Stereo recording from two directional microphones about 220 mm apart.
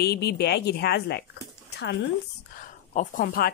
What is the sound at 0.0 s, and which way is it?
Speech, 45° left (ahead or behind).